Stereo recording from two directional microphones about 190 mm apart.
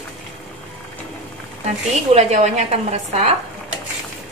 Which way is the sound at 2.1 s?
35° right (ahead or behind).